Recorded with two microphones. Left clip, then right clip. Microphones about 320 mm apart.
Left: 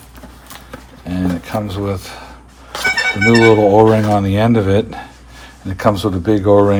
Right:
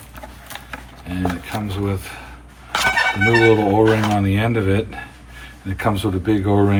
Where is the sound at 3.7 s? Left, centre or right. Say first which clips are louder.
Left 5 dB; left.